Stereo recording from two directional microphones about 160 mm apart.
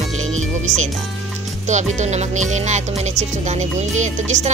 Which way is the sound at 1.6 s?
45° right (ahead or behind).